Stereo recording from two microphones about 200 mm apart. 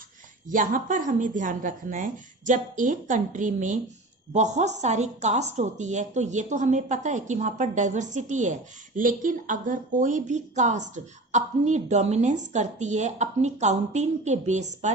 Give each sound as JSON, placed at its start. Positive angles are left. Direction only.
{"t": 0.5, "sound": "speech", "side_deg": -40}